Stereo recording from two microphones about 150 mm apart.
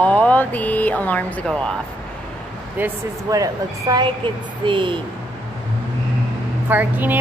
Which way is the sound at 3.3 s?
25° right (ahead or behind).